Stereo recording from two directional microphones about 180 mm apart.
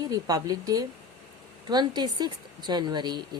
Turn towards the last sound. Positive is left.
turn(degrees=-25)  # may be behind; listen again after turning